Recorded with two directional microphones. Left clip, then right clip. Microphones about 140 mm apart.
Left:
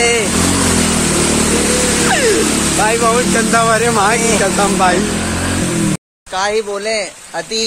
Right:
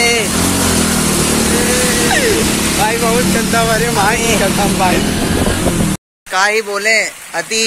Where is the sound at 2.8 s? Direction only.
60° left (ahead or behind).